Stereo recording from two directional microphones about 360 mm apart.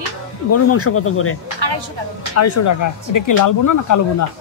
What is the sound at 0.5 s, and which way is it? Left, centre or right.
Speech, left.